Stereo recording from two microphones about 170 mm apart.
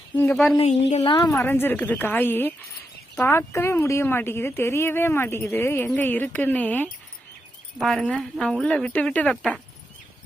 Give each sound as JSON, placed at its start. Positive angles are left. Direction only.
{"t": 0.6, "sound": "a woman's voice", "side_deg": 40}
{"t": 1.0, "sound": "a woman's voice", "side_deg": 25}
{"t": 1.4, "sound": "speech", "side_deg": 10}